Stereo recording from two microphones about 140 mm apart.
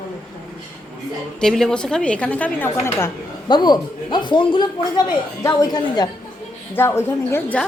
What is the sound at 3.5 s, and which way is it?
Speech, 30° left (ahead or behind).